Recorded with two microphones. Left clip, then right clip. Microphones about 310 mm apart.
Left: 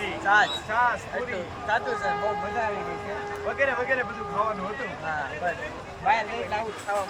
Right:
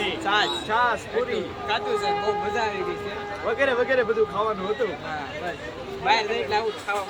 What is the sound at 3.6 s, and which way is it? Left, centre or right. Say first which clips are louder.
Speech: right 3 dB; centre.